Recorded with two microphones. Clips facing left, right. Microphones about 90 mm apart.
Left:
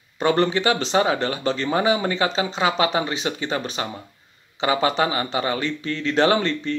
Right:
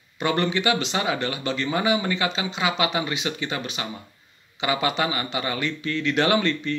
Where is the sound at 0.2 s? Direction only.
35° left (ahead or behind).